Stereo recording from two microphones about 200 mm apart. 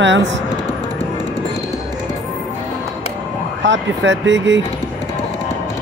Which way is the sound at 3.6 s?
65° right (ahead or behind).